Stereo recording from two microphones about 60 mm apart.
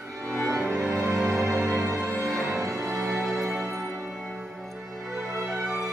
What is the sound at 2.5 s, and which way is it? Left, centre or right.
Music, right.